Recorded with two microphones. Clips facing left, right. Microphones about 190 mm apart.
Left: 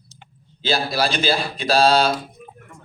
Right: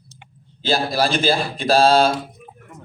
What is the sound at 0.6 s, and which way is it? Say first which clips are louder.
Speech: right 2 dB; 50° right (ahead or behind).